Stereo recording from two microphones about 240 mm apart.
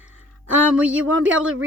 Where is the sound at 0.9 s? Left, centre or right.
Right.